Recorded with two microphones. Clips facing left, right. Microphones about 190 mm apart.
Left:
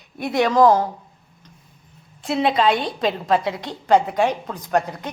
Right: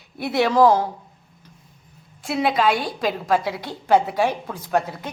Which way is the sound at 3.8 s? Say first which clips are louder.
Left 1 dB; 5° right (ahead or behind).